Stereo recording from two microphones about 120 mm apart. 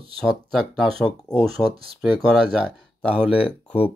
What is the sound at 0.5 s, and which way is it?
Speech, centre (ahead or behind).